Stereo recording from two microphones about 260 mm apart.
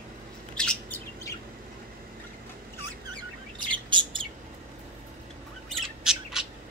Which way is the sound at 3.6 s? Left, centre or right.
Centre.